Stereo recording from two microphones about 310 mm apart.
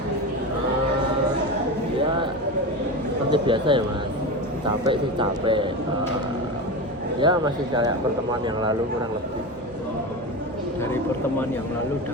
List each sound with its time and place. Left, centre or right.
3.3 s speech: centre
7.2 s speech: centre